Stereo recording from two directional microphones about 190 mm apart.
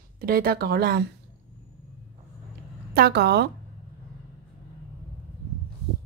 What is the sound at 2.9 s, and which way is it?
Speech, 55° right (ahead or behind).